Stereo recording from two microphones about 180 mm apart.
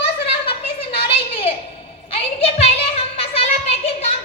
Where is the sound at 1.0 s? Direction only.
35° left (ahead or behind).